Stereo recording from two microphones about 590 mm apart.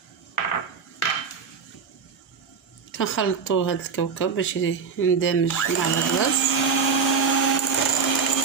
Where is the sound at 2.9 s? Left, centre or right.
Centre.